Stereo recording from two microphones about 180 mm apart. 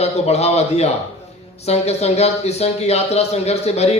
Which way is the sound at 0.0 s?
35° left (ahead or behind).